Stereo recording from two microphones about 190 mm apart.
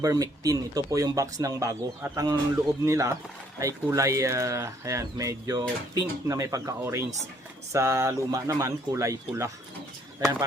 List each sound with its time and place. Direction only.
0.0 s speech: 20° right (ahead or behind)